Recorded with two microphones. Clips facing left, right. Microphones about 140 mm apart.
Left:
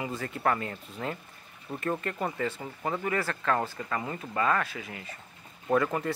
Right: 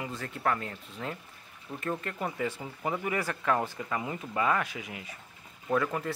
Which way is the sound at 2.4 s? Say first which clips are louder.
Left 1 dB; 10° right (ahead or behind).